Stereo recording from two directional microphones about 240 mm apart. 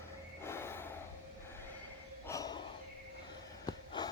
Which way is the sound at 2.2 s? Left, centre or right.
Centre.